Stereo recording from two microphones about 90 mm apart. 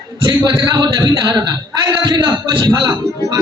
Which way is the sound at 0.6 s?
55° right (ahead or behind).